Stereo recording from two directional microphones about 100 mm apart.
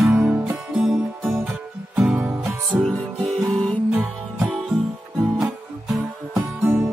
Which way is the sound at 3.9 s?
15° right (ahead or behind).